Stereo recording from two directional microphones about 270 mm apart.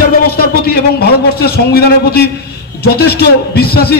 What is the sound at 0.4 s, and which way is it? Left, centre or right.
A man's voice, left.